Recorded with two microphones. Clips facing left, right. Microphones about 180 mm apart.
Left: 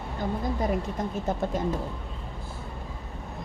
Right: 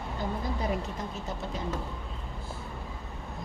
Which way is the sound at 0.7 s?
50° left (ahead or behind).